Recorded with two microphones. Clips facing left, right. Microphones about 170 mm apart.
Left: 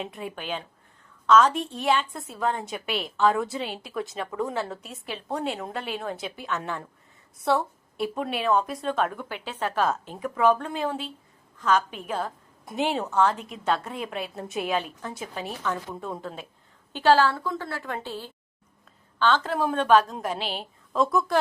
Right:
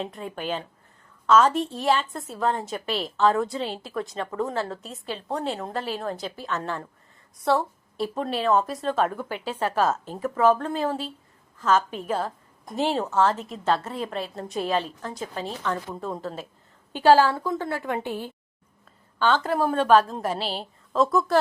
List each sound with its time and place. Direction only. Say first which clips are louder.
0.1 s speech: even; 10° left (ahead or behind)
0.3 s a woman's voice: right 3 dB; centre (ahead or behind)
7.3 s a woman's voice: right 1 dB; centre (ahead or behind)
13.3 s a woman's voice: right 3 dB; 35° right (ahead or behind)
13.7 s a woman's voice: right 2 dB; centre (ahead or behind)
17.0 s a woman's voice: right 3 dB; 10° right (ahead or behind)
20.4 s a woman's voice: right 2 dB; 35° right (ahead or behind)
20.9 s a woman's voice: right 2 dB; centre (ahead or behind)